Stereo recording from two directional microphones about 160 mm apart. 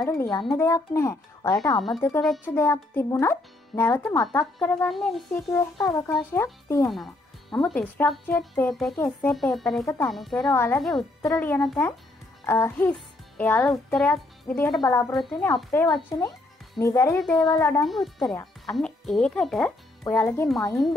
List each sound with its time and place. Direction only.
0.0 s a child's voice: 25° left (ahead or behind)
1.8 s speech: centre (ahead or behind)
2.4 s a child's voice: 15° left (ahead or behind)
4.6 s speech: 5° left (ahead or behind)
5.8 s a child's voice: 20° left (ahead or behind)
6.9 s music: centre (ahead or behind)
7.6 s a child's voice: 10° left (ahead or behind)
10.5 s a child's voice: 15° left (ahead or behind)
10.8 s speech: centre (ahead or behind)
11.2 s a child's voice: 10° left (ahead or behind)
12.4 s a child's voice: 20° left (ahead or behind)
14.8 s a child's voice: 20° left (ahead or behind)
17.8 s speech: centre (ahead or behind)
20.0 s speech: 15° left (ahead or behind)